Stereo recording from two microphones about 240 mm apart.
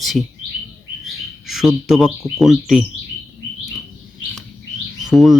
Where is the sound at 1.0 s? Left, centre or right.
Centre.